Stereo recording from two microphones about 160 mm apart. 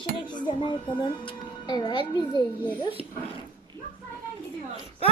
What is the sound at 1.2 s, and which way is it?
A child's voice, 30° left (ahead or behind).